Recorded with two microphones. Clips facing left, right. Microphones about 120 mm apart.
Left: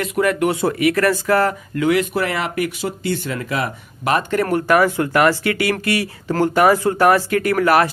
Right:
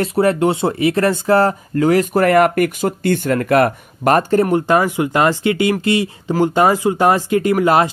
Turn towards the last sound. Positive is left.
turn(degrees=-20)  # may be behind; listen again after turning